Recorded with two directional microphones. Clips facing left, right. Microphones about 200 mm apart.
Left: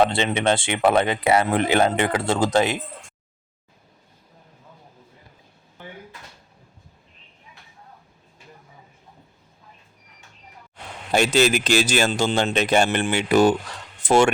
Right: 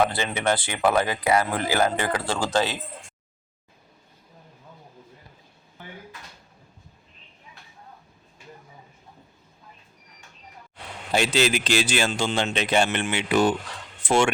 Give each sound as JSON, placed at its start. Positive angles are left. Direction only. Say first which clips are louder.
{"t": 0.0, "sound": "speech", "louder": "left 4 dB", "side_deg": 25}
{"t": 11.1, "sound": "speech", "louder": "left 4 dB", "side_deg": 50}